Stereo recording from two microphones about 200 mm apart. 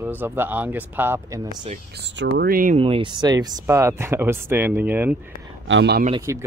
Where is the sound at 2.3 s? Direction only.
45° right (ahead or behind).